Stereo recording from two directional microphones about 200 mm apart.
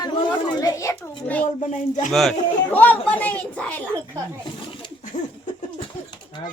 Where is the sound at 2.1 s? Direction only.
Centre (ahead or behind).